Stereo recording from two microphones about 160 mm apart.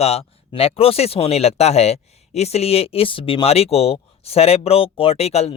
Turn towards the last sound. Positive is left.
turn(degrees=40)  # may be behind; listen again after turning